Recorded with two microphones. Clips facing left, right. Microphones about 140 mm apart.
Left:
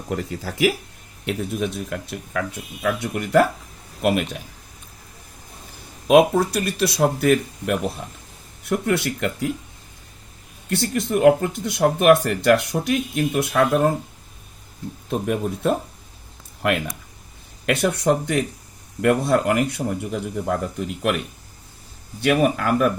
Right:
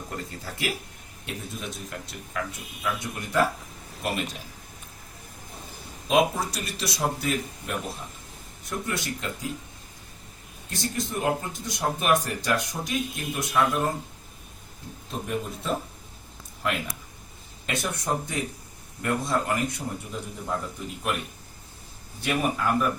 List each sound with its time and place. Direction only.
0.1 s speech: 90° left
1.3 s speech: 65° left (ahead or behind)
6.1 s speech: 60° left (ahead or behind)
10.7 s speech: 65° left (ahead or behind)
15.1 s speech: 70° left (ahead or behind); by 21.2 s 85° left
22.2 s speech: 80° left